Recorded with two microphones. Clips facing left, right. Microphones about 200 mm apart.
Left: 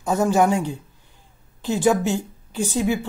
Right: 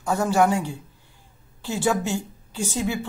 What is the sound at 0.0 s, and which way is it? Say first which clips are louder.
A woman's voice: left 2 dB; 20° left (ahead or behind).